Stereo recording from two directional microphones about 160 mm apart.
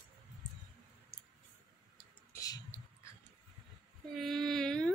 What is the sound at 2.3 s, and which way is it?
Clicking, 20° left (ahead or behind).